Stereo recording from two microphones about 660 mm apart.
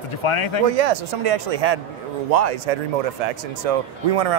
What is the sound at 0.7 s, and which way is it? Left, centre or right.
Speech, right.